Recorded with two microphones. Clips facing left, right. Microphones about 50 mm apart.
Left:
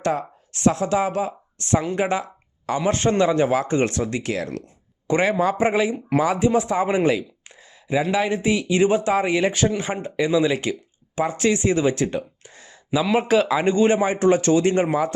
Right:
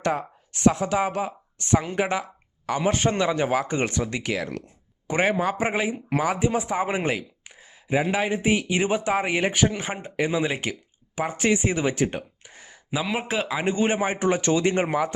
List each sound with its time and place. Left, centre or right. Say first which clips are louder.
0.8 s speech: left 3 dB; right